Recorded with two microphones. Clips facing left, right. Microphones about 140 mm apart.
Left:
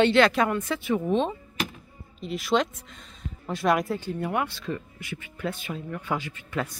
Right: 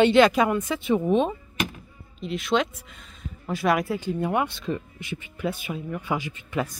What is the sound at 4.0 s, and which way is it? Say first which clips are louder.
Speech: right 3 dB; 20° right (ahead or behind).